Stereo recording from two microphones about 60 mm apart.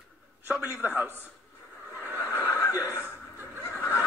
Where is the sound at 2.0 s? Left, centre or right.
Right.